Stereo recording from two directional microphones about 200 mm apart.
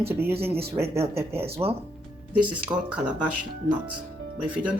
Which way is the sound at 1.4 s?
30° right (ahead or behind).